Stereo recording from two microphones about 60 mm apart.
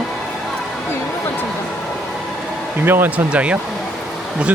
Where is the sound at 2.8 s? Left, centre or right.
Right.